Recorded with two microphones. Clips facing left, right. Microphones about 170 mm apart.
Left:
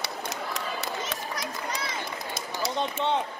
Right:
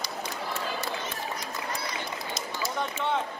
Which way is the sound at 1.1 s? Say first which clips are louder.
Left 1 dB; 90° left.